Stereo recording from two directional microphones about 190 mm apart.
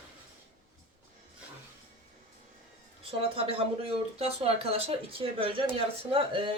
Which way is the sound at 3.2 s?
30° right (ahead or behind).